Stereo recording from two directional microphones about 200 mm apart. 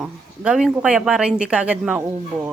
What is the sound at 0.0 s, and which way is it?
A woman's voice, centre (ahead or behind).